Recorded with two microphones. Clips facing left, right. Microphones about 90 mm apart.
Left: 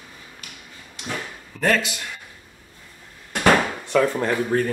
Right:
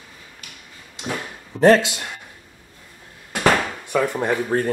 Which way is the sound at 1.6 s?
30° right (ahead or behind).